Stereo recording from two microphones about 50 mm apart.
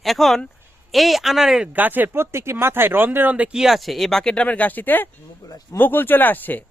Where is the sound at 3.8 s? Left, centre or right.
Centre.